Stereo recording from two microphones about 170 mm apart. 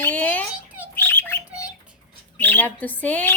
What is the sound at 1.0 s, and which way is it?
Bird, 15° left (ahead or behind).